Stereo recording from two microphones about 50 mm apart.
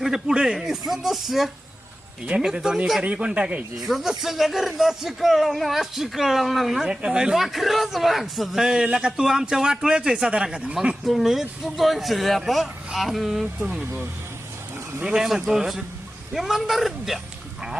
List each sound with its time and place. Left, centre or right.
0.0 s a man's voice: centre
3.0 s speech: right
3.8 s speech: centre
6.9 s a man's voice: centre
7.3 s a man's voice: centre; by 10.8 s right
11.0 s speech: centre
15.1 s a man's voice: centre